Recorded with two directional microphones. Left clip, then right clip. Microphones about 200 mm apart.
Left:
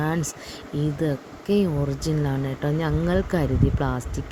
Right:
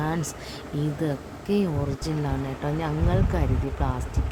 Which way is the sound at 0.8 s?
15° left (ahead or behind).